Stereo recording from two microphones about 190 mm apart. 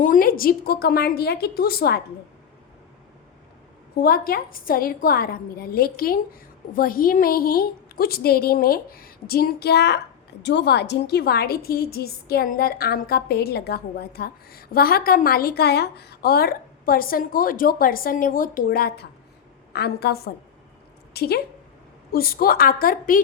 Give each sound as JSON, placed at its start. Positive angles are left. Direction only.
{"t": 0.0, "sound": "a woman's voice", "side_deg": 45}
{"t": 4.0, "sound": "a woman's voice", "side_deg": 50}